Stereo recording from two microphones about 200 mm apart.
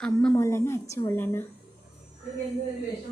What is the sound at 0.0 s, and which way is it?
A woman's voice, 5° left (ahead or behind).